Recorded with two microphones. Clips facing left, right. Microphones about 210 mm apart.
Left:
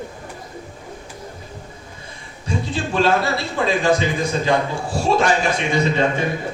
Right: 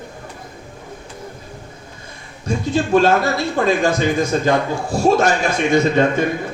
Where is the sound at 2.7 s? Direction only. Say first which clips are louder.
Right 5 dB; 45° right (ahead or behind).